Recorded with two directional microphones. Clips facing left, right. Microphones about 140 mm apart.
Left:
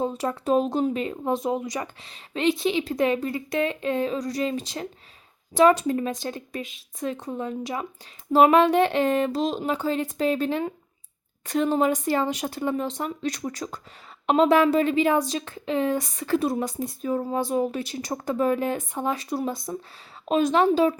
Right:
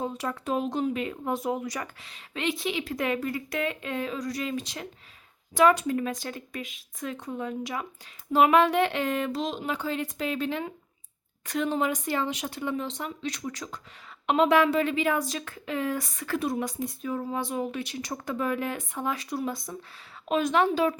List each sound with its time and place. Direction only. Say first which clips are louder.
0.0 s a woman's voice: left 5 dB; 30° left (ahead or behind)